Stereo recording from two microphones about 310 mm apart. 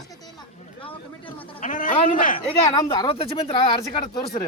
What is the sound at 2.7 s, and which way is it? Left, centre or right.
Speech, centre.